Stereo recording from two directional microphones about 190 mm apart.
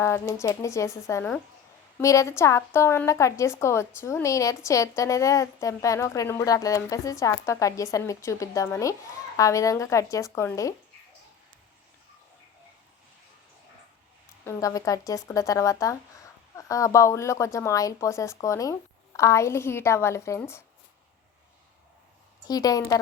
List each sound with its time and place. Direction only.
0.0 s speech: 15° left (ahead or behind)
14.4 s speech: 15° left (ahead or behind)
22.4 s a woman's voice: 20° left (ahead or behind)